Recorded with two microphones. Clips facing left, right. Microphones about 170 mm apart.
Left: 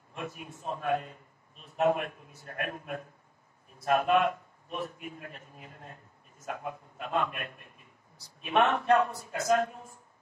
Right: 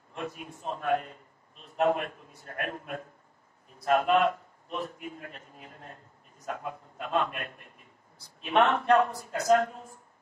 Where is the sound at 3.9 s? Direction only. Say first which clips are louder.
Right 1 dB; 15° left (ahead or behind).